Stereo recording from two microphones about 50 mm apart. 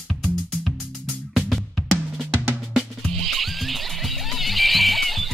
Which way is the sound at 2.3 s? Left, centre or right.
Right.